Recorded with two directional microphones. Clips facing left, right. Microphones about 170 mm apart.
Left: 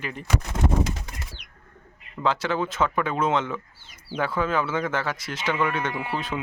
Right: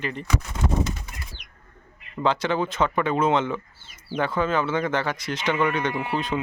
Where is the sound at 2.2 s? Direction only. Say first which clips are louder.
Right 2 dB; 5° left (ahead or behind).